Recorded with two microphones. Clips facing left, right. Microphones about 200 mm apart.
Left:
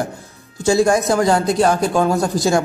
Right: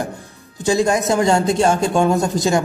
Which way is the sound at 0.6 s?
15° right (ahead or behind).